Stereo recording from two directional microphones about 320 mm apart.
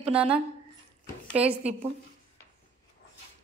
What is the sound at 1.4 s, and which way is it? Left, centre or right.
Speech, centre.